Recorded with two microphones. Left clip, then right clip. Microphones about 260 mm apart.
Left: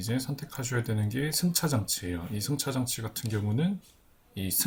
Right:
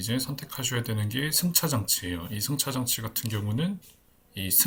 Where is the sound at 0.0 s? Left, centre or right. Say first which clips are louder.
Right 3 dB; centre.